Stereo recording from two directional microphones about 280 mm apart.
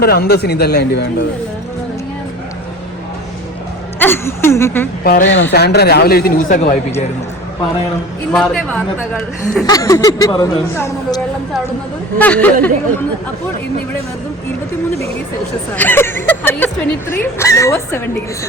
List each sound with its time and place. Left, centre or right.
0.0 s a man's voice: left
4.0 s speech: centre
5.0 s a man's voice: left
8.3 s a man's voice: centre
9.6 s speech: centre
12.2 s a man's voice: centre
15.7 s speech: centre